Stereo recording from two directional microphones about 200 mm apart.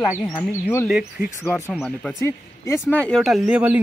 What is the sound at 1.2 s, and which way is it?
Speech, 40° left (ahead or behind).